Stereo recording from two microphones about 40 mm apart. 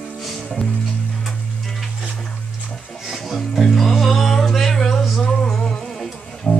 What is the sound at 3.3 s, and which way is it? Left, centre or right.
Music, centre.